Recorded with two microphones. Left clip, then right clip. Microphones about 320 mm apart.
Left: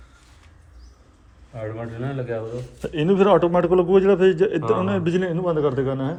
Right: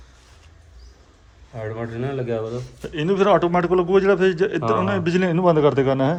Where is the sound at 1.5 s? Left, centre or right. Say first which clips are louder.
Right 2 dB; right.